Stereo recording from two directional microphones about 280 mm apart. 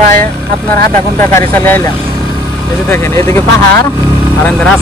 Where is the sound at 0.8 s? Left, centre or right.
Centre.